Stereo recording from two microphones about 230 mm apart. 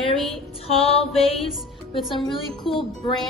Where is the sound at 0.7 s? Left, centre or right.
Left.